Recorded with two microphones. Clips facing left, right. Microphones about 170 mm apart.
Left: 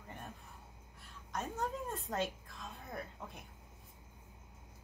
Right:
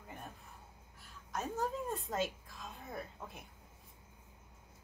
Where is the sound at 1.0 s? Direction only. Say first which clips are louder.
Right 1 dB; centre (ahead or behind).